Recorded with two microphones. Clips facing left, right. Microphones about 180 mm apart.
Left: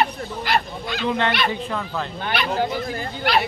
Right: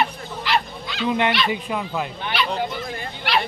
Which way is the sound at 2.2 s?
50° left (ahead or behind).